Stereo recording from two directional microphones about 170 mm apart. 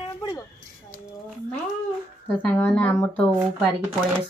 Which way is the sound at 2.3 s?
10° left (ahead or behind).